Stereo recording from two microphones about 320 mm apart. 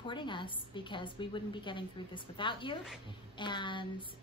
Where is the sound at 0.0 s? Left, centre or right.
Centre.